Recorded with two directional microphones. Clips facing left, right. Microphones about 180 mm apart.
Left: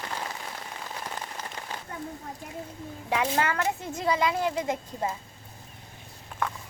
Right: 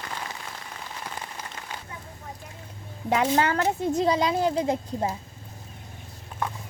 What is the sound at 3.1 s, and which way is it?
Speech, 40° right (ahead or behind).